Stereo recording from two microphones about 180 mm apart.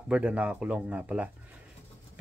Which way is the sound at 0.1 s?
5° right (ahead or behind).